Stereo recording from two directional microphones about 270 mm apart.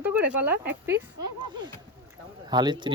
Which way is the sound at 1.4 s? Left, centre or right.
Centre.